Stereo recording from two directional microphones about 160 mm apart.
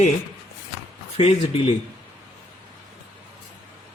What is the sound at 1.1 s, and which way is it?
Speech, 40° left (ahead or behind).